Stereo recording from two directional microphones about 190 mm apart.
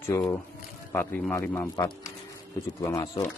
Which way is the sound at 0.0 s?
15° left (ahead or behind).